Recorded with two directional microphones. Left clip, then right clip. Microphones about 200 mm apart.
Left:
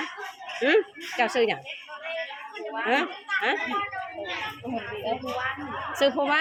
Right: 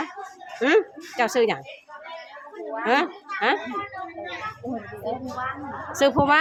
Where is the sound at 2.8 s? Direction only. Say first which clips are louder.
Right 4 dB; 20° right (ahead or behind).